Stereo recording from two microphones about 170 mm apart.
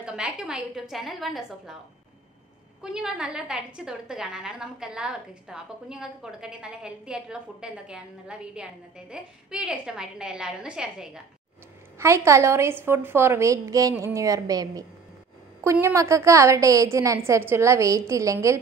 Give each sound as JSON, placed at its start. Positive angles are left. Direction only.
{"t": 0.0, "sound": "a woman's voice", "side_deg": -5}
{"t": 2.8, "sound": "a woman's voice", "side_deg": -5}
{"t": 12.0, "sound": "a woman's voice", "side_deg": -15}